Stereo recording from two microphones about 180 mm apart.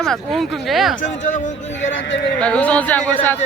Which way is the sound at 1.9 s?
85° left.